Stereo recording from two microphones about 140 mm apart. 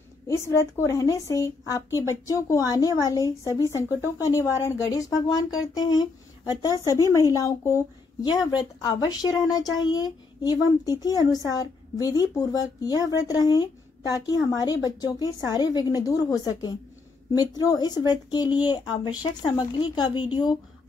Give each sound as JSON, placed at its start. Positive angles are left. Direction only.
{"t": 0.3, "sound": "a woman's voice", "side_deg": 20}